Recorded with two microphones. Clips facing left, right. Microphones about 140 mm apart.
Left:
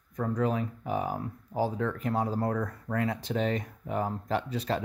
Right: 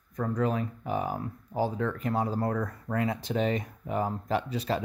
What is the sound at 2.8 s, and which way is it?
Speech, 15° right (ahead or behind).